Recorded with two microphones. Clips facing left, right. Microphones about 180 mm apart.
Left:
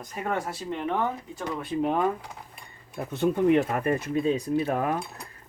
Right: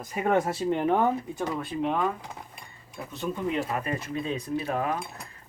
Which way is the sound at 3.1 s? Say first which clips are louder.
Left 9 dB; 60° left (ahead or behind).